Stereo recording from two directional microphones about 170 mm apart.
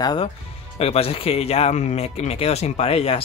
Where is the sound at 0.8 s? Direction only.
35° left (ahead or behind).